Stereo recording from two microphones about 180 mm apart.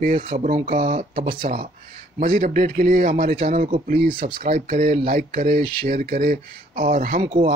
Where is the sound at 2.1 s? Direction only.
50° right (ahead or behind).